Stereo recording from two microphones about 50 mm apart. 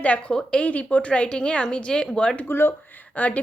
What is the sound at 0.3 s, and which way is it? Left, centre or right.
A woman's voice, centre.